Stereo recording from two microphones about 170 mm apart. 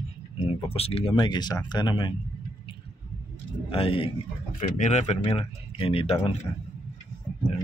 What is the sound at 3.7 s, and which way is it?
Speech, 30° left (ahead or behind).